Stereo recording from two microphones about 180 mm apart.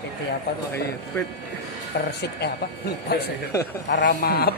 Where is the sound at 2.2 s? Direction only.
65° left (ahead or behind).